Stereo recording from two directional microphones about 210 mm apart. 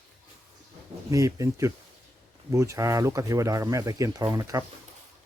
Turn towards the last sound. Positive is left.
turn(degrees=-15)  # may be behind; listen again after turning